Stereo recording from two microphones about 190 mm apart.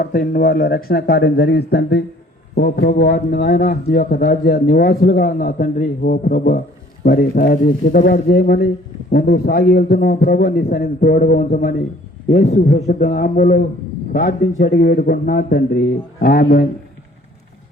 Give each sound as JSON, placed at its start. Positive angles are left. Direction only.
{"t": 0.0, "sound": "a man's voice", "side_deg": 50}